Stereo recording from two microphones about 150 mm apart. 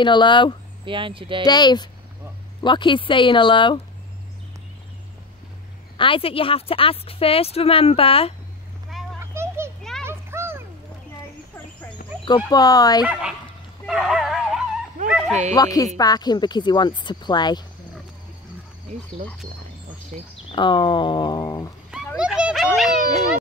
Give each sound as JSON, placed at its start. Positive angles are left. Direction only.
{"t": 0.0, "sound": "a woman's voice", "side_deg": 30}
{"t": 0.8, "sound": "speech", "side_deg": -35}
{"t": 1.4, "sound": "a woman's voice", "side_deg": 25}
{"t": 5.9, "sound": "a woman's voice", "side_deg": 35}
{"t": 9.2, "sound": "a sound", "side_deg": -15}
{"t": 10.0, "sound": "children playing", "side_deg": -15}
{"t": 12.4, "sound": "speech", "side_deg": 25}
{"t": 13.0, "sound": "speech", "side_deg": -5}
{"t": 13.8, "sound": "dog", "side_deg": 0}
{"t": 15.0, "sound": "bow-wow", "side_deg": 0}
{"t": 15.5, "sound": "speech", "side_deg": 25}
{"t": 20.5, "sound": "a woman's voice", "side_deg": 30}
{"t": 21.9, "sound": "a sound", "side_deg": -5}